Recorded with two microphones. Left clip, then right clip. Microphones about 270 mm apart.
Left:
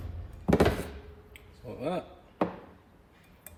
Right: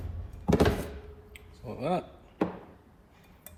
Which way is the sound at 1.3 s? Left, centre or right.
Centre.